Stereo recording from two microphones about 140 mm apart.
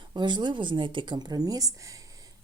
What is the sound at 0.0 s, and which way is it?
Speech, 30° right (ahead or behind).